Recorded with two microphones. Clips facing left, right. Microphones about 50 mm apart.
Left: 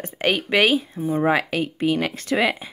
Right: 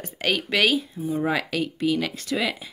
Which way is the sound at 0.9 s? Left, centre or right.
Left.